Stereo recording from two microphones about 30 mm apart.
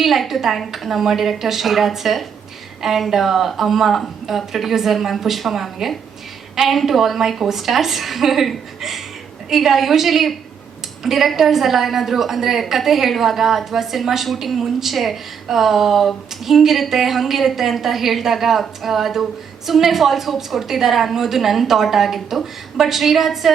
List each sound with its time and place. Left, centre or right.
0.0 s a woman's voice: centre
3.1 s a woman's voice: centre